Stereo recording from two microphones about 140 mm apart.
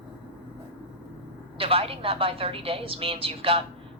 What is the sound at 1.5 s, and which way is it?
A woman's voice, 40° right (ahead or behind).